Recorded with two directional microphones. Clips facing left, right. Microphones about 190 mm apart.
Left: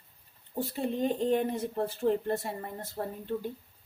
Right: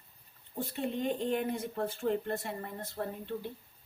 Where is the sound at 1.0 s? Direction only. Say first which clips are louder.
Left 5 dB; 35° left (ahead or behind).